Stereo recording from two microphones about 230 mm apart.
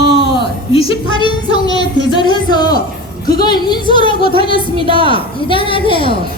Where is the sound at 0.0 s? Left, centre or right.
Right.